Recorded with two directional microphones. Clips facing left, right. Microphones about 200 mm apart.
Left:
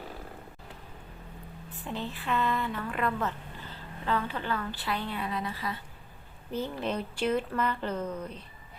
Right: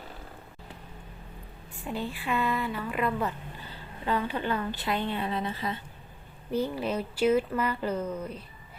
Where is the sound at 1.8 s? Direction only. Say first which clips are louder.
Right 3 dB; 10° right (ahead or behind).